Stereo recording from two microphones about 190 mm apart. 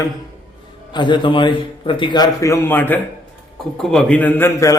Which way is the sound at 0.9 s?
25° left (ahead or behind).